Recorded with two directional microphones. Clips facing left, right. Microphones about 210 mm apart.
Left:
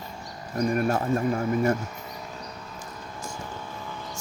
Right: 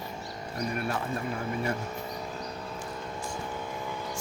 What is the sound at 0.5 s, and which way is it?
Speech, 45° left (ahead or behind).